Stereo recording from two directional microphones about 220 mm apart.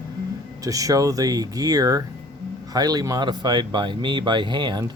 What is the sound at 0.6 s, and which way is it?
Speech, 15° right (ahead or behind).